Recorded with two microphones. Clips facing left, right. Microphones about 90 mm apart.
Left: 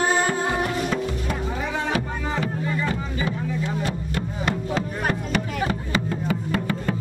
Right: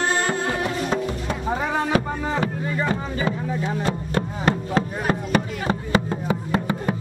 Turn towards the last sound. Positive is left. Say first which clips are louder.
# right 2 dB
turn(degrees=-25)  # may be behind; listen again after turning